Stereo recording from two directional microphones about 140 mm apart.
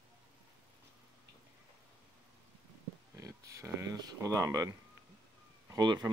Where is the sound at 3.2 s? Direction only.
25° right (ahead or behind).